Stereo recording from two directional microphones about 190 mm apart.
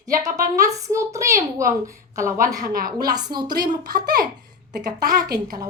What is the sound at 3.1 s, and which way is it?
Speech, 20° right (ahead or behind).